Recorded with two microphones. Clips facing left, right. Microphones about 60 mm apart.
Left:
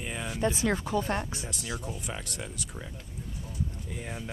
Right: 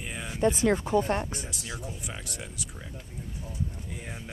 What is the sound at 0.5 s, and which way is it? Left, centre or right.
Speech, right.